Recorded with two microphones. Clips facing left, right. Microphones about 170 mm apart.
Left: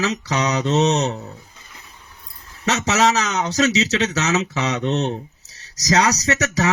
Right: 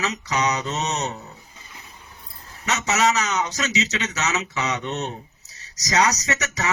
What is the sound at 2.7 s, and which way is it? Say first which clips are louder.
Speech: left 3 dB; 90° left.